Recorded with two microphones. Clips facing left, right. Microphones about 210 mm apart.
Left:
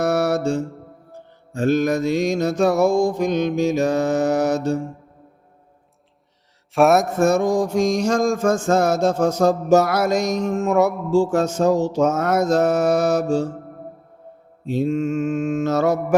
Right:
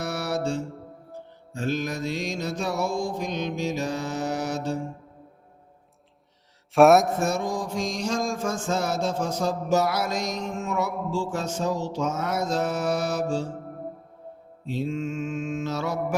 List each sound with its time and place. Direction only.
0.0 s mantra: 45° left (ahead or behind)
6.7 s mantra: centre (ahead or behind)
7.2 s mantra: 45° left (ahead or behind)
14.7 s mantra: 50° left (ahead or behind)